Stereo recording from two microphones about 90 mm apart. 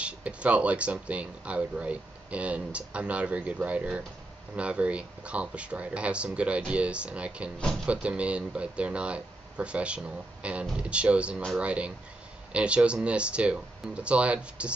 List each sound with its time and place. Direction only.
0.0 s speech: 15° right (ahead or behind)